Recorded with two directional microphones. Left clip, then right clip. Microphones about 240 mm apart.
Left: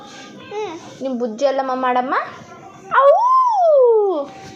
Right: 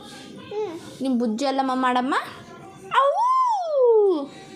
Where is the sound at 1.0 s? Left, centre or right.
Right.